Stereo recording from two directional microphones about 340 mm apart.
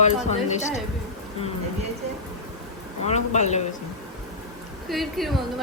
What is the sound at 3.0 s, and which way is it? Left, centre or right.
Speech, centre.